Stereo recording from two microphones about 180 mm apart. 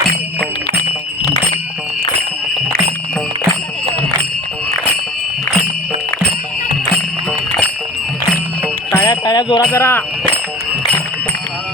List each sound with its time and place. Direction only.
8.9 s music: 15° left (ahead or behind)
9.7 s speech: 15° left (ahead or behind)